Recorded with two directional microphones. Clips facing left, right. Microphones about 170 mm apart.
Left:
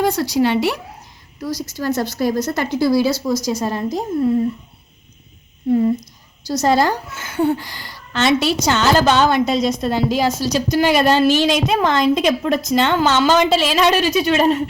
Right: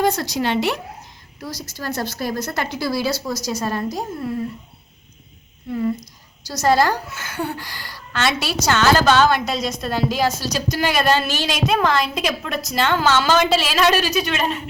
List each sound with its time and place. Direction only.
0.0 s a woman's voice: 10° left (ahead or behind)
3.3 s a woman's voice: 50° left (ahead or behind)
3.6 s a woman's voice: 20° left (ahead or behind)
6.5 s a woman's voice: 25° left (ahead or behind)